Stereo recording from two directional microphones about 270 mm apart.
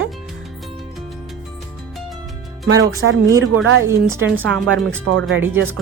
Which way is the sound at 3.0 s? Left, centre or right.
Right.